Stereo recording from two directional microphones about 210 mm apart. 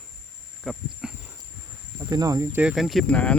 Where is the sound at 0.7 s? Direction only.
Centre (ahead or behind).